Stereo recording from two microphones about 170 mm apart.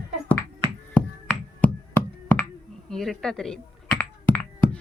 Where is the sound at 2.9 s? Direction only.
5° left (ahead or behind).